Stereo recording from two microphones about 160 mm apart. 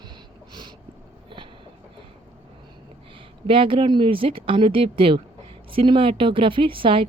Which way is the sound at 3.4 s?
35° right (ahead or behind).